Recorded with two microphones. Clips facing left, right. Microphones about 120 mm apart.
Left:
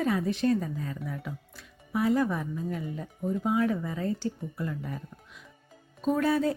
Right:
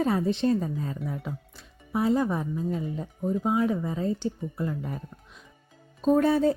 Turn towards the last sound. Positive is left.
turn(degrees=-30)  # may be behind; listen again after turning